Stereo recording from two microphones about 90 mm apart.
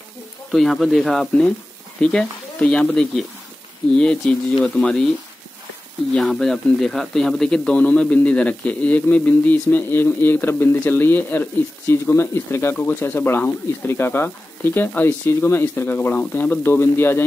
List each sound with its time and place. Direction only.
0.5 s a man's voice: centre (ahead or behind)
6.1 s a man's voice: 5° left (ahead or behind); by 17.2 s 25° left (ahead or behind)